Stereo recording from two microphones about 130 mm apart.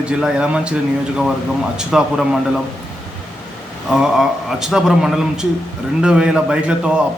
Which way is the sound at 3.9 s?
5° right (ahead or behind).